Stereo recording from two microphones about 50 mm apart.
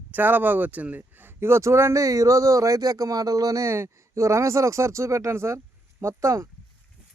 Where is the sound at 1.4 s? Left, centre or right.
Right.